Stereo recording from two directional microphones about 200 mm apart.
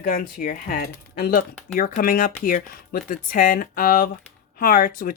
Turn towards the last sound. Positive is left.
turn(degrees=45)  # may be behind; listen again after turning